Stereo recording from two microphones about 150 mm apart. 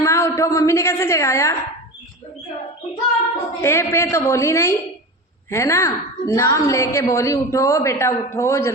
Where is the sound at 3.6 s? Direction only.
15° left (ahead or behind).